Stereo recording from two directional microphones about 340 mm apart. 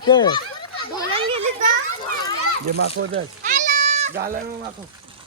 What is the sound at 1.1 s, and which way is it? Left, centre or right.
Children playing, centre.